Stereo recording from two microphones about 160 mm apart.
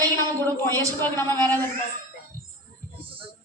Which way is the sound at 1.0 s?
15° left (ahead or behind).